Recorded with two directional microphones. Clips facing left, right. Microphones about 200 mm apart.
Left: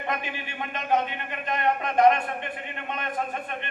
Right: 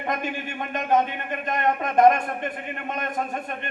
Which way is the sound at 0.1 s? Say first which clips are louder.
Right 5 dB; 45° right (ahead or behind).